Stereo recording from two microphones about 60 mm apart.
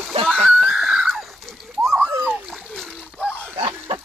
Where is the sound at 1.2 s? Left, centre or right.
Centre.